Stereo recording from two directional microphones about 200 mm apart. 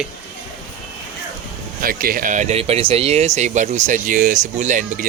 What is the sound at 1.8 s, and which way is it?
Speech, 45° right (ahead or behind).